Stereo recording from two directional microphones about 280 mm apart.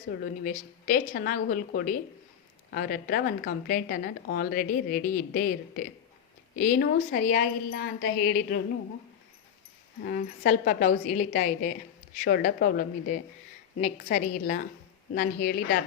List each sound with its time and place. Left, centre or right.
0.1 s speech: left
10.0 s a woman's voice: left